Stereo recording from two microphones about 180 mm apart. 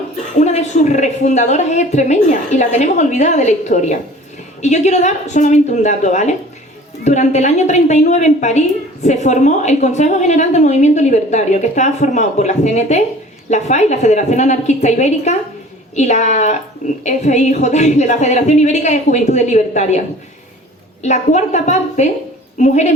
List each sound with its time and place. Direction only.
0.3 s a woman's voice: 40° left (ahead or behind)
21.0 s a woman's voice: 40° left (ahead or behind)